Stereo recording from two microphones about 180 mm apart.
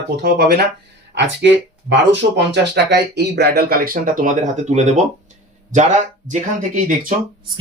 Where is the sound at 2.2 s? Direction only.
55° right (ahead or behind).